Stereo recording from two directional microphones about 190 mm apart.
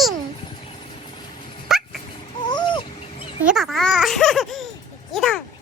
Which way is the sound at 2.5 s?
25° left (ahead or behind).